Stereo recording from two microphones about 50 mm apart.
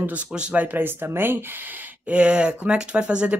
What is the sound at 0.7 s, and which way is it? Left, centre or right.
Speech, right.